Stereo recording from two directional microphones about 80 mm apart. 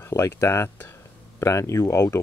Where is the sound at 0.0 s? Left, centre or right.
Left.